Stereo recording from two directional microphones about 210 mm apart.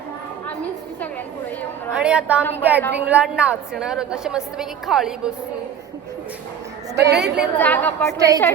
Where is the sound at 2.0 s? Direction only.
5° right (ahead or behind).